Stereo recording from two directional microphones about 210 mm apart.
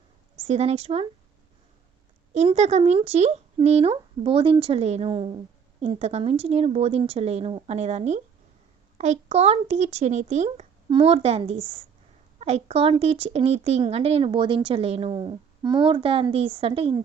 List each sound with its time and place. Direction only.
0.4 s speech: 30° right (ahead or behind)
2.3 s speech: 30° right (ahead or behind)